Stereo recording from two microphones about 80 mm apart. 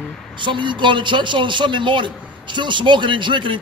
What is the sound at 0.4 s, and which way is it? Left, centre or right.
A man's voice, right.